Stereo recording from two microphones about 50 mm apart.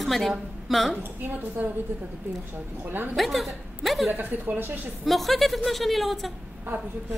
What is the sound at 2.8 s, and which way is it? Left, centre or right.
Speech, right.